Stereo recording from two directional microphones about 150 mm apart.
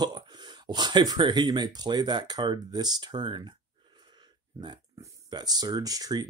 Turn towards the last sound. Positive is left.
turn(degrees=-25)  # may be behind; listen again after turning